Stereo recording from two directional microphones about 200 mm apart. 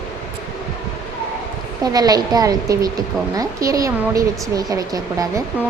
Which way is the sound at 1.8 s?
20° right (ahead or behind).